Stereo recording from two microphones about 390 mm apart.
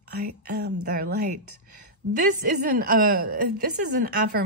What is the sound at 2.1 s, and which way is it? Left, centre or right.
Speech, right.